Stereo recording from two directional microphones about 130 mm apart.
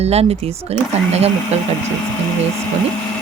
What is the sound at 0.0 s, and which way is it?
Speech, 50° right (ahead or behind).